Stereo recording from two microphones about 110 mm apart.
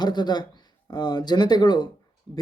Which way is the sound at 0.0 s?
40° left (ahead or behind).